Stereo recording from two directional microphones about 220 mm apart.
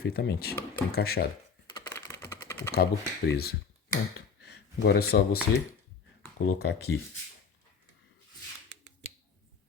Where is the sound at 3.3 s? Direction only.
45° left (ahead or behind).